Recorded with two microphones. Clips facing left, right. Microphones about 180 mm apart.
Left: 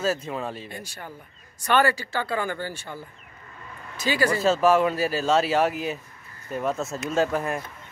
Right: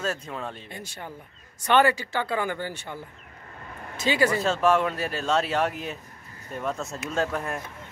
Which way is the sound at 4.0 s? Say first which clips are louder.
Even; 25° right (ahead or behind).